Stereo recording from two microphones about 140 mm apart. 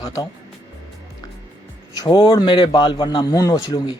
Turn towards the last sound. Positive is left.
turn(degrees=30)  # may be behind; listen again after turning